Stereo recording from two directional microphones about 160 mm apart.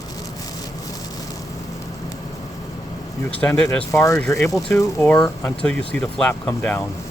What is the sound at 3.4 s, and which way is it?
Speech, 10° left (ahead or behind).